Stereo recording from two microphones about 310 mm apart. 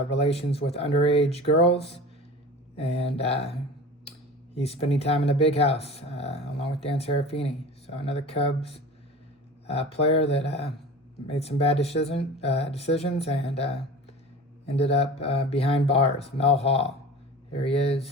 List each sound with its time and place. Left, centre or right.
0.1 s speech: centre
14.8 s speech: centre